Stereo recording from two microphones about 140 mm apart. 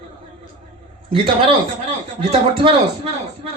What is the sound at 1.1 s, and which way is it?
A man's voice, 40° right (ahead or behind).